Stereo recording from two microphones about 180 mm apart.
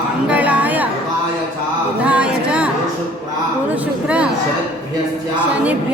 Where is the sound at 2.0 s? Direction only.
5° right (ahead or behind).